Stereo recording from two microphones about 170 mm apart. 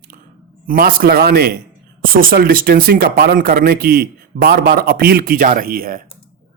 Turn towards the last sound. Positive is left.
turn(degrees=-60)  # may be behind; listen again after turning